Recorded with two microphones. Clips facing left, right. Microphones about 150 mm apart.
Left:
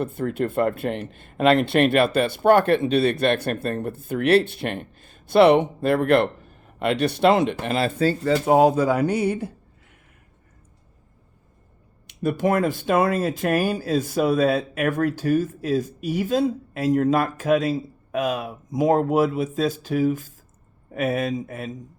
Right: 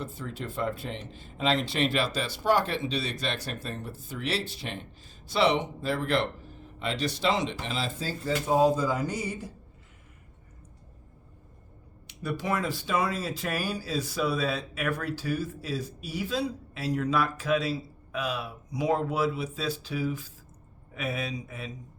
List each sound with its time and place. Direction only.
0.0 s speech: 55° left (ahead or behind)
12.0 s speech: 55° left (ahead or behind)